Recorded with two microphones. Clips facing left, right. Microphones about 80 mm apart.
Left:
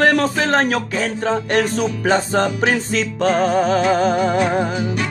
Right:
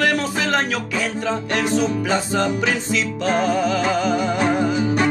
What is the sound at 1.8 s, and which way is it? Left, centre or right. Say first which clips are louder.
Speech: left 2 dB; left.